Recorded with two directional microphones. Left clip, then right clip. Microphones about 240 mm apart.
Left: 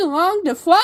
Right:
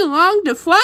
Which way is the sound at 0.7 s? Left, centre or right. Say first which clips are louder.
Even; centre.